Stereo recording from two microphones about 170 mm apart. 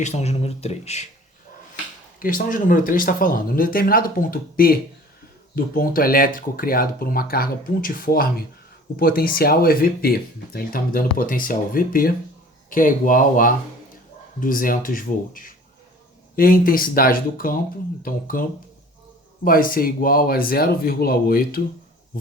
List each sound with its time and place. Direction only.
0.0 s speech: 40° left (ahead or behind)
2.1 s speech: 55° left (ahead or behind)
19.5 s speech: 55° left (ahead or behind)